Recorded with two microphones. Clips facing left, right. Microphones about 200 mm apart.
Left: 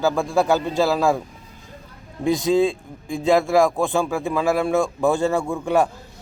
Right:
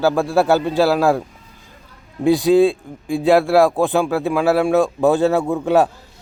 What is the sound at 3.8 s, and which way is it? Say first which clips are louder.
Speech: right 4 dB; 15° right (ahead or behind).